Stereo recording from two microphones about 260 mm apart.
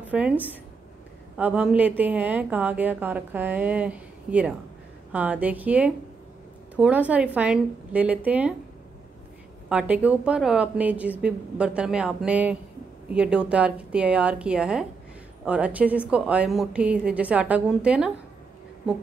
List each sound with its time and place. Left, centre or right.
0.0 s a woman's voice: centre
9.7 s a woman's voice: centre